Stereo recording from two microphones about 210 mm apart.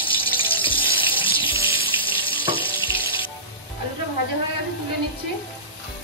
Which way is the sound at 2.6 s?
25° left (ahead or behind).